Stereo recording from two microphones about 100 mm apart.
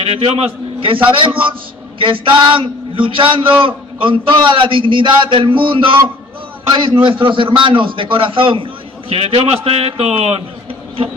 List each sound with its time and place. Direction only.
0.1 s a man's voice: 85° right; by 8.6 s 60° right (ahead or behind)
9.1 s a man's voice: 70° right (ahead or behind)